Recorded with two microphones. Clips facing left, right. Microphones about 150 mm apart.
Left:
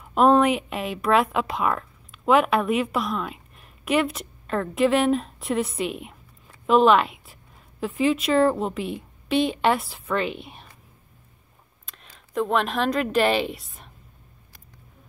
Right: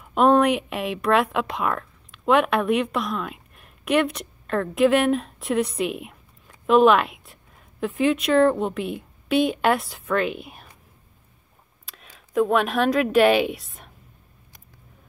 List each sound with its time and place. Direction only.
0.0 s a woman's voice: centre (ahead or behind)
11.8 s speech: 5° right (ahead or behind)